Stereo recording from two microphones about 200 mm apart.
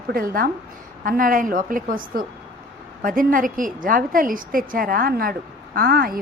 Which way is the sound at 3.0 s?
45° right (ahead or behind).